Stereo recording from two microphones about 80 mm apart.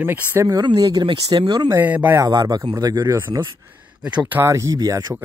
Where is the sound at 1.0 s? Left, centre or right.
Right.